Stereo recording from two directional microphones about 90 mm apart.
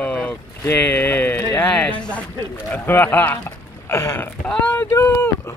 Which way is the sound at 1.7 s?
15° left (ahead or behind).